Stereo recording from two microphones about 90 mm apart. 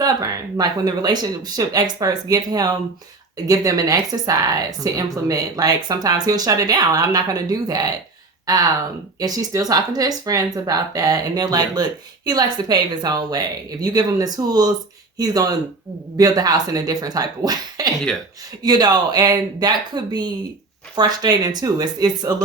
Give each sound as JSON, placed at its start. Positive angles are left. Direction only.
{"t": 0.0, "sound": "speech", "side_deg": -45}